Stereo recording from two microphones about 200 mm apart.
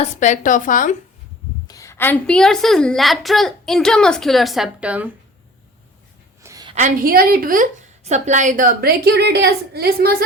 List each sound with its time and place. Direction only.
0.0 s speech: 35° left (ahead or behind)
1.6 s a woman's voice: 15° left (ahead or behind); by 5.1 s 5° right (ahead or behind)
6.4 s a sound: 20° right (ahead or behind)
6.7 s a woman's voice: 40° right (ahead or behind)